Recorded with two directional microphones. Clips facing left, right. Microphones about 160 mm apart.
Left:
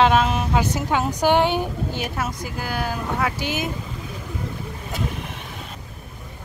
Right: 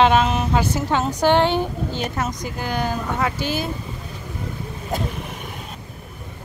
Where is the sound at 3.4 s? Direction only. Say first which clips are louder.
Right 1 dB; 15° left (ahead or behind).